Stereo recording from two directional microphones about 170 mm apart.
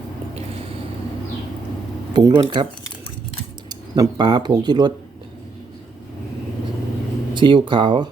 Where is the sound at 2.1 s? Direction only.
25° right (ahead or behind).